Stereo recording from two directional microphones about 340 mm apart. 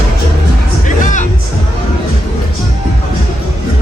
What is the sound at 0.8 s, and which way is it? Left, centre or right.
Music, left.